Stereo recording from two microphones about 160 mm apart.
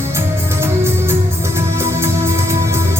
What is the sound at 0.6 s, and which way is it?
Music, 15° right (ahead or behind).